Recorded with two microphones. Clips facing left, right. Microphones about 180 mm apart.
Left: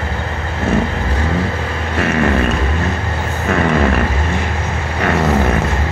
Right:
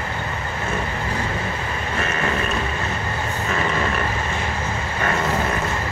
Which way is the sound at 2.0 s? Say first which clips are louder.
Left 10 dB; 70° left (ahead or behind).